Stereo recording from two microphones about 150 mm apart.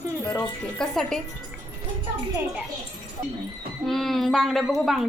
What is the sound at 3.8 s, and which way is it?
Speech, centre (ahead or behind).